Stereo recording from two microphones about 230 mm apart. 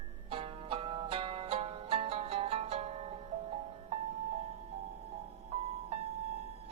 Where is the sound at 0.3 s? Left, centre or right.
Right.